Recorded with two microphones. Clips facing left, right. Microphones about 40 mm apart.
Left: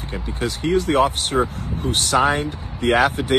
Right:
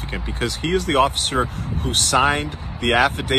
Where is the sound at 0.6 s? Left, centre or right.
Right.